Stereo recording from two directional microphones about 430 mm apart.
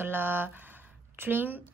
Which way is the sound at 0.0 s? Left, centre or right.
Centre.